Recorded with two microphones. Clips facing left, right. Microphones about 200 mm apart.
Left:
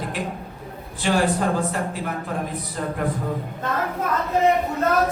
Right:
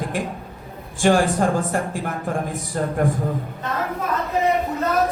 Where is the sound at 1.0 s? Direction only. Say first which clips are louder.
Right 4 dB; 45° right (ahead or behind).